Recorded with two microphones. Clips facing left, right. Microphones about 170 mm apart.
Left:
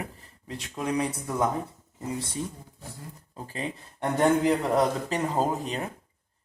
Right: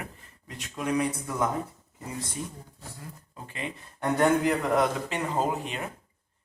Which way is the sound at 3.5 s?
35° left (ahead or behind).